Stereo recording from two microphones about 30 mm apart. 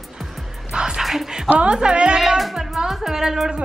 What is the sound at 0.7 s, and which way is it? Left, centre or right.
Music, right.